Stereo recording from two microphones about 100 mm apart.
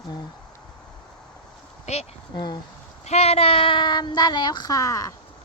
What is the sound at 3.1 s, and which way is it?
Speech, 90° left.